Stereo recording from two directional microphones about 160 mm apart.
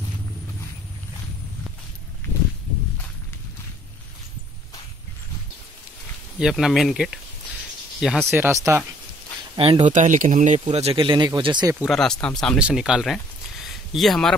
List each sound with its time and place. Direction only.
6.4 s speech: centre (ahead or behind)
8.3 s speech: 15° right (ahead or behind)
9.6 s speech: 35° right (ahead or behind)
9.8 s speech: 50° right (ahead or behind); by 11.7 s 25° right (ahead or behind)
11.8 s speech: centre (ahead or behind)
13.7 s a sound: centre (ahead or behind)